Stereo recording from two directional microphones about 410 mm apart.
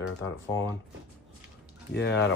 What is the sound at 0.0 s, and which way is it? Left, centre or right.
Speech, left.